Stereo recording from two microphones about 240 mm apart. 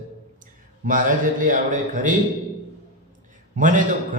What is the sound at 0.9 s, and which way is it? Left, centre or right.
Speech, right.